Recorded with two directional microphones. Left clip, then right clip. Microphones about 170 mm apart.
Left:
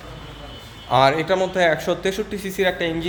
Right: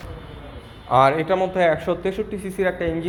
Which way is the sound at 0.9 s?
20° left (ahead or behind).